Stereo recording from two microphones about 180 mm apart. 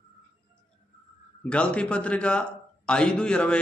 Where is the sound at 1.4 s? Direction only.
5° left (ahead or behind).